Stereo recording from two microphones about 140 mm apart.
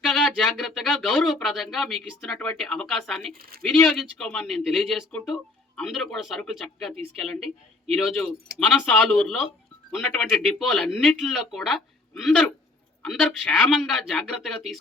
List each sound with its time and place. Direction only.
0.0 s speech: 5° left (ahead or behind)